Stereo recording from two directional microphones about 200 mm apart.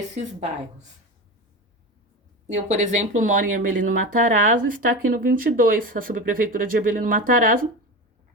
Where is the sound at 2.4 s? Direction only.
35° right (ahead or behind).